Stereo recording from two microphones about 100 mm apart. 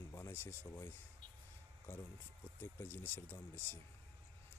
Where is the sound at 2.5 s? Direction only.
20° left (ahead or behind).